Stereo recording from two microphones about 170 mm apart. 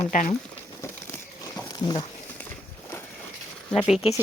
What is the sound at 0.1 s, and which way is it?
Speech, 50° left (ahead or behind).